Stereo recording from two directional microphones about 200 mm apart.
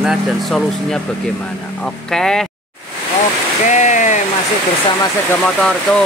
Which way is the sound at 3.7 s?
35° left (ahead or behind).